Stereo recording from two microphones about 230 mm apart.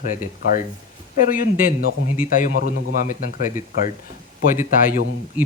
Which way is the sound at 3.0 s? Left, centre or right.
Left.